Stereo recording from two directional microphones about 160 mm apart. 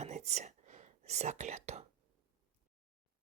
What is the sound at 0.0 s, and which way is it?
Whispering, 45° right (ahead or behind).